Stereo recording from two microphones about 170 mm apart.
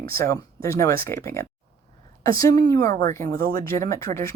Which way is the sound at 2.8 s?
55° right (ahead or behind).